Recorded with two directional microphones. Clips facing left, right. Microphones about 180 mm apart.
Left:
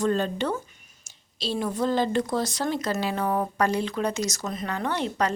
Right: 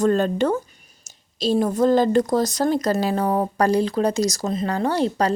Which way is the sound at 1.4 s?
45° right (ahead or behind).